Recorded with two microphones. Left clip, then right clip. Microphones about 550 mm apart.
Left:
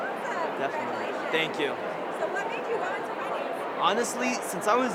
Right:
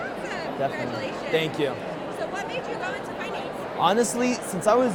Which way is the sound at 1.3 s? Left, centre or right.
Right.